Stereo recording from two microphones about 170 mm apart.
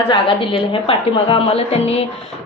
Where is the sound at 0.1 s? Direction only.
30° left (ahead or behind).